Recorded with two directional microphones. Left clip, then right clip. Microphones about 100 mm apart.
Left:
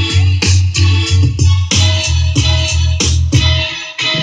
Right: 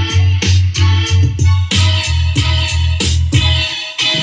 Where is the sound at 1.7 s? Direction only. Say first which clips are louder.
Left 1 dB; 30° left (ahead or behind).